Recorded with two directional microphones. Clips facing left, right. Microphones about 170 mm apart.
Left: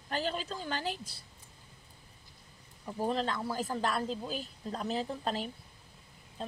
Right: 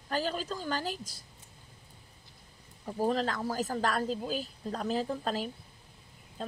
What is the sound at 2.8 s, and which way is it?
Speech, 40° right (ahead or behind).